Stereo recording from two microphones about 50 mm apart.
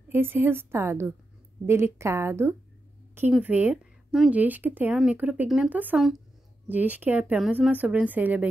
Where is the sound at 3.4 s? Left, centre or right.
Right.